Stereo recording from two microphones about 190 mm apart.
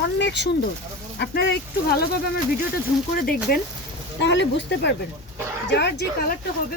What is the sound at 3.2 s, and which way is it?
Speech, 50° left (ahead or behind).